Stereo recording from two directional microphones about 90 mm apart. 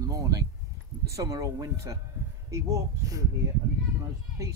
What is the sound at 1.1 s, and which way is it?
A man's voice, 35° right (ahead or behind).